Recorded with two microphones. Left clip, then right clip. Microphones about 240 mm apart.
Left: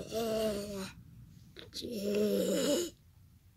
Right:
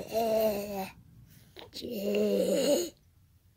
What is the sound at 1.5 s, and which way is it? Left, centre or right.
Snoring, centre.